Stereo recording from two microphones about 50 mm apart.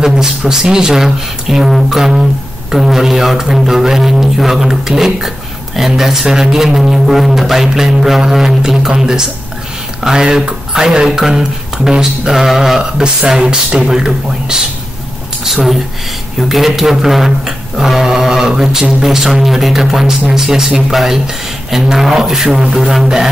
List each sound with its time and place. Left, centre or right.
0.0 s speech: centre
12.9 s a woman's voice: centre